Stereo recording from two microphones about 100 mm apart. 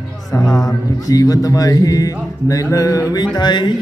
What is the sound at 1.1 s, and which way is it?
Speech, 35° left (ahead or behind).